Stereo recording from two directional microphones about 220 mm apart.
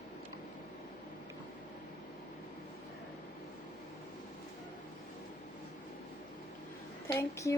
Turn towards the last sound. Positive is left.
turn(degrees=15)  # may be behind; listen again after turning